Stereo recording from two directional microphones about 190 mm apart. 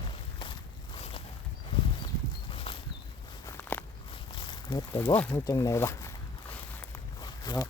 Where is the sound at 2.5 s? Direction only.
30° left (ahead or behind).